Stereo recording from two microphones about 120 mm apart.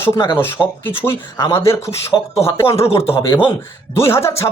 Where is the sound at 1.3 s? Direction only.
25° left (ahead or behind).